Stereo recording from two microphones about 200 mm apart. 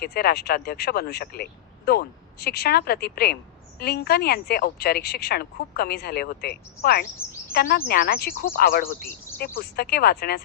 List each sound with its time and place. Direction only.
0.0 s speech: 50° left (ahead or behind)